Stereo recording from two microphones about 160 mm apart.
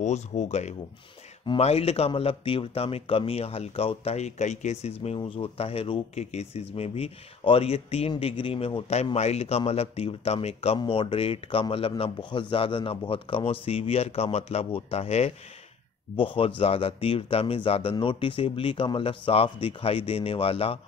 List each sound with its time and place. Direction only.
0.0 s speech: 45° left (ahead or behind)
5.0 s speech: 35° left (ahead or behind)